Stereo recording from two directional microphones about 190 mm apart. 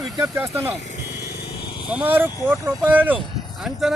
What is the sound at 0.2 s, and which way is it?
Speech, 15° right (ahead or behind).